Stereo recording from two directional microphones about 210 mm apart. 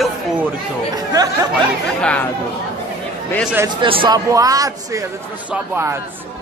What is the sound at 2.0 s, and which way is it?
Speech, 5° left (ahead or behind).